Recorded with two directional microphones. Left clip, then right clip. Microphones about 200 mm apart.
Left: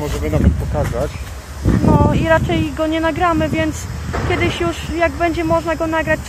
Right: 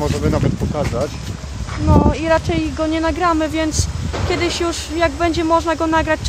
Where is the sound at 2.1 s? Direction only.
5° right (ahead or behind).